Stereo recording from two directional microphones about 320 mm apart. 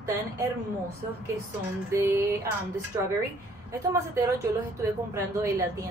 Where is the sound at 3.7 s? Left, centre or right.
Centre.